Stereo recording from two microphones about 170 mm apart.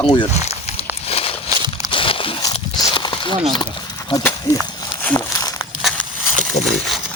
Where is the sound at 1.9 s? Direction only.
30° left (ahead or behind).